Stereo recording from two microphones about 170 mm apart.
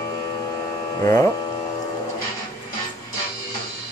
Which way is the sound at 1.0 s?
15° left (ahead or behind).